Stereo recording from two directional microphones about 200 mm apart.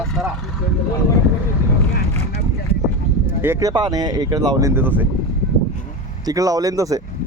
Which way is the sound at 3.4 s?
15° right (ahead or behind).